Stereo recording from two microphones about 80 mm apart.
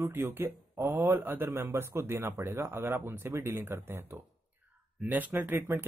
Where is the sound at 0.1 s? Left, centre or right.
Right.